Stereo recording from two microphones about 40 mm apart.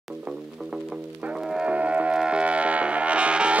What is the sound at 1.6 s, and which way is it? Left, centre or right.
Music, right.